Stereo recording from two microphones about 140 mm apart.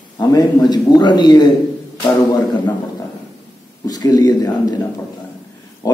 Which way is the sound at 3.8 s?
25° left (ahead or behind).